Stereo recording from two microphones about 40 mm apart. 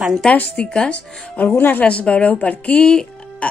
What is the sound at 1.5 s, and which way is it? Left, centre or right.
Speech, left.